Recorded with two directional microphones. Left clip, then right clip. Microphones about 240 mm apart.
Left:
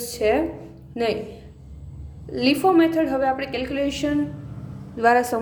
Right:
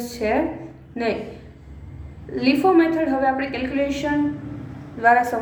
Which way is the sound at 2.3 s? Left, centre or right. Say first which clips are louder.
Right 1 dB; left.